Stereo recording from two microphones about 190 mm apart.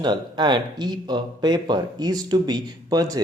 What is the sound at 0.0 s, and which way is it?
Speech, 25° right (ahead or behind).